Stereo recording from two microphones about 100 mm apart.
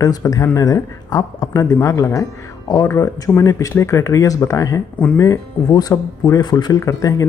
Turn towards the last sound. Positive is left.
turn(degrees=35)  # may be behind; listen again after turning